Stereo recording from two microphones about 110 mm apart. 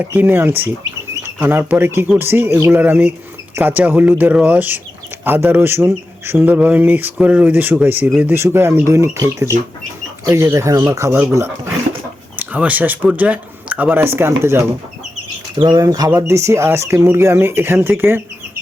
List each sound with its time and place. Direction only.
0.0 s speech: 20° right (ahead or behind)
12.4 s speech: 15° right (ahead or behind)
15.6 s speech: 35° right (ahead or behind); by 18.2 s 20° right (ahead or behind)